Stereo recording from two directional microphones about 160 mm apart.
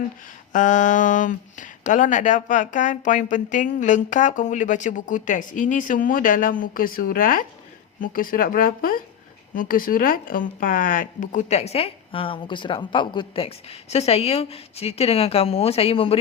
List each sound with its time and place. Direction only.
0.5 s speech: 50° left (ahead or behind); by 16.1 s 35° left (ahead or behind)